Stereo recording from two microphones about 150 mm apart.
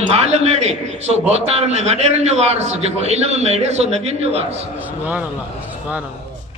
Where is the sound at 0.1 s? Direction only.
45° right (ahead or behind).